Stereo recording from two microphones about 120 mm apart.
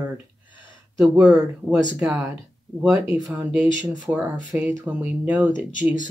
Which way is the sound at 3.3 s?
15° right (ahead or behind).